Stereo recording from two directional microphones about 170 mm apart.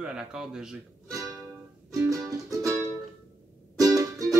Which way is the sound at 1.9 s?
20° right (ahead or behind).